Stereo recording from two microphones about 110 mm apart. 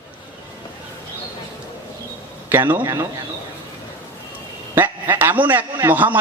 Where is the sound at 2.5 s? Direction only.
15° right (ahead or behind).